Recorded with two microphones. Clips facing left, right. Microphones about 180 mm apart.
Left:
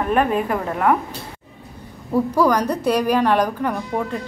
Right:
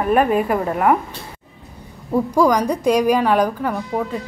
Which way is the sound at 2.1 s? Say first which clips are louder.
Right 1 dB; 10° right (ahead or behind).